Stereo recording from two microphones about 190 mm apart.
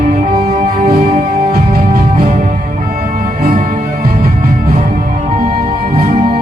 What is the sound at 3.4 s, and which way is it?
Music, 40° right (ahead or behind).